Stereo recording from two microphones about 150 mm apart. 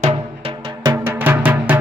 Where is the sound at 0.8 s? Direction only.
15° right (ahead or behind).